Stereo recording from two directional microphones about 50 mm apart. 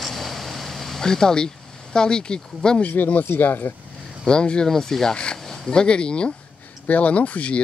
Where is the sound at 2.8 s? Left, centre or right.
Left.